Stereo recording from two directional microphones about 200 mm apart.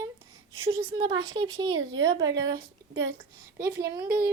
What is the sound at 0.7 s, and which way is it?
Speech, 25° right (ahead or behind).